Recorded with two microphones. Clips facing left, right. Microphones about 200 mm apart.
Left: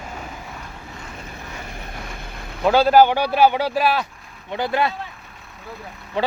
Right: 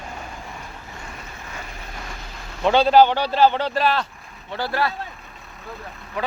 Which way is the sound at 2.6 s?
5° left (ahead or behind).